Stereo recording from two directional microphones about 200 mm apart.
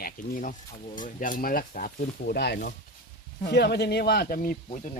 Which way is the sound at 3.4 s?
55° left (ahead or behind).